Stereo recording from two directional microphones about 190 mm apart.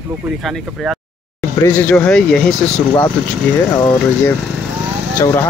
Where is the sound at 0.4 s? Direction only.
Centre (ahead or behind).